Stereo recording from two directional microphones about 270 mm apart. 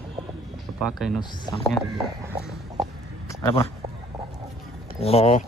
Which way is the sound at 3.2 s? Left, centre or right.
Centre.